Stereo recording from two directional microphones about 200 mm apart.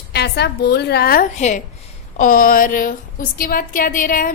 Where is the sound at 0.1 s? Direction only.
55° left (ahead or behind).